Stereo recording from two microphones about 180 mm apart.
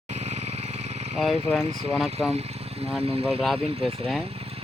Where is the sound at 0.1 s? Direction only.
40° right (ahead or behind).